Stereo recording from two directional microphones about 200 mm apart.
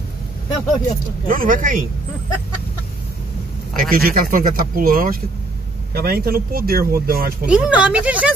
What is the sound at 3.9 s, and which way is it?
Speech, 45° right (ahead or behind).